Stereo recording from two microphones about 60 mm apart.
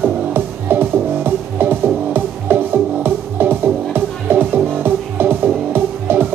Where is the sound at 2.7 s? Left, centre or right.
Right.